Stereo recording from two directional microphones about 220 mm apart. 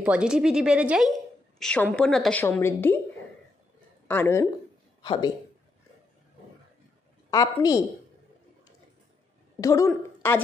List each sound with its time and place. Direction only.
0.0 s a woman's voice: 5° right (ahead or behind)
4.1 s a woman's voice: 10° left (ahead or behind)
5.0 s a woman's voice: 20° left (ahead or behind)
7.2 s a woman's voice: 15° left (ahead or behind)
9.6 s a woman's voice: 15° left (ahead or behind)